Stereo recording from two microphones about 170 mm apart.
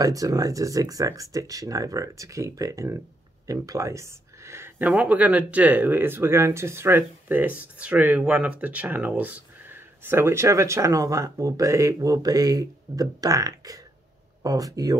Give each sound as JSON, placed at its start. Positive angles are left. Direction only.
{"t": 0.0, "sound": "speech", "side_deg": -20}